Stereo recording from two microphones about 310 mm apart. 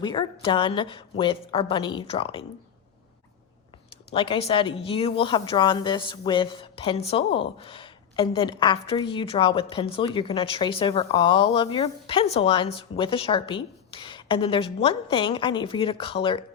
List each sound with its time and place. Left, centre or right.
0.0 s a woman's voice: centre
4.1 s a woman's voice: centre